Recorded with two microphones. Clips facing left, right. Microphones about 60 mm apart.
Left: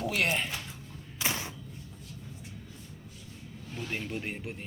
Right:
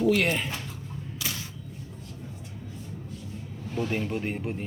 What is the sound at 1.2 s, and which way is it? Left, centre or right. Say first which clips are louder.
Camera: left 3 dB; left.